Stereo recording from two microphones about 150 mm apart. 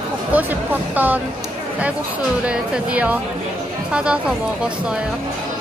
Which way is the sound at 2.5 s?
10° right (ahead or behind).